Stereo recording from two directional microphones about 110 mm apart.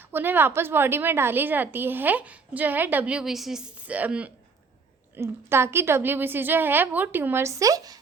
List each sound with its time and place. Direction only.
0.0 s a woman's voice: 20° right (ahead or behind)